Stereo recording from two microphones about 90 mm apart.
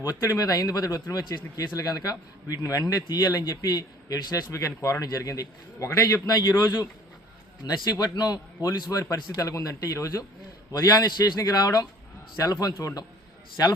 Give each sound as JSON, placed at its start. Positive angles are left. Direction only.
{"t": 0.0, "sound": "a man's voice", "side_deg": 40}
{"t": 4.5, "sound": "a man's voice", "side_deg": 35}